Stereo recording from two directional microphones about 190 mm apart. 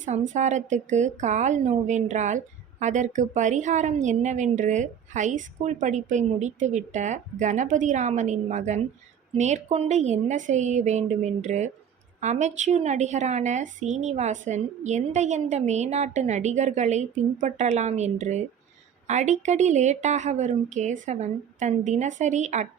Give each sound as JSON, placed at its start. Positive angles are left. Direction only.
{"t": 0.0, "sound": "a woman's voice", "side_deg": -40}